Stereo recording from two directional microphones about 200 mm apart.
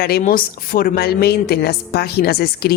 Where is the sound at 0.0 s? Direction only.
45° left (ahead or behind).